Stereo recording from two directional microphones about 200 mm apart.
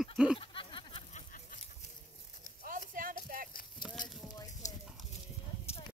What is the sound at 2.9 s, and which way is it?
Music, 45° right (ahead or behind).